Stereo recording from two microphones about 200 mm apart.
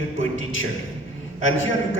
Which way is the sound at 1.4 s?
75° left (ahead or behind).